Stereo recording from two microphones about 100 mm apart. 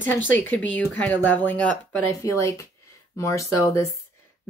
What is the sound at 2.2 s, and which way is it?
Speech, 30° left (ahead or behind).